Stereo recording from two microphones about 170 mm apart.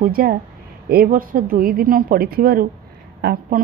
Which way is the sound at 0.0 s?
60° right (ahead or behind).